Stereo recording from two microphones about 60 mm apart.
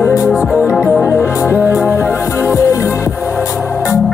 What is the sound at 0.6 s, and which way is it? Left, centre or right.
Music, left.